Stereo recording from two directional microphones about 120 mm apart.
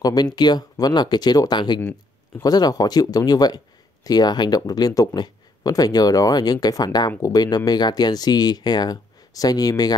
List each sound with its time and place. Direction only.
0.0 s speech: 35° left (ahead or behind)
1.8 s a sound: 15° left (ahead or behind)
2.4 s speech: 35° left (ahead or behind)